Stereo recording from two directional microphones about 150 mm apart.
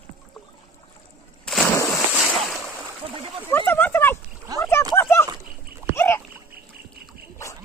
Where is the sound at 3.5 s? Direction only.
15° left (ahead or behind).